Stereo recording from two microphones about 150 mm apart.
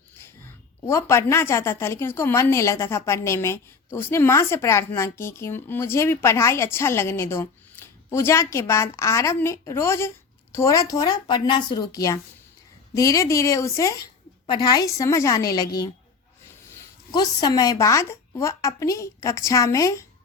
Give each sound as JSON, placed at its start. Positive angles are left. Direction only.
{"t": 0.3, "sound": "a woman's voice", "side_deg": 15}
{"t": 17.1, "sound": "speech", "side_deg": 30}